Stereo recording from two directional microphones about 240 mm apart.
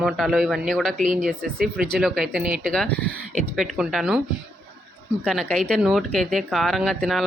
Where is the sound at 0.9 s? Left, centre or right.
Right.